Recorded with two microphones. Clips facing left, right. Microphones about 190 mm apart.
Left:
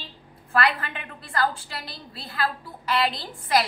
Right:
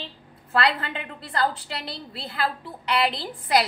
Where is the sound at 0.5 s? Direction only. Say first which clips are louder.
Right 1 dB; 25° right (ahead or behind).